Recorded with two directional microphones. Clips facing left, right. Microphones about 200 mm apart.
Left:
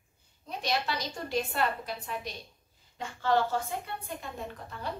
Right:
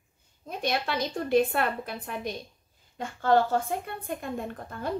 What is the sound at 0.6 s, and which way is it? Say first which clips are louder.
A woman's voice: right 3 dB; 55° right (ahead or behind).